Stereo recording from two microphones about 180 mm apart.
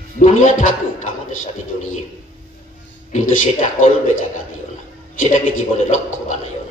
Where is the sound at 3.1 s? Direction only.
45° left (ahead or behind).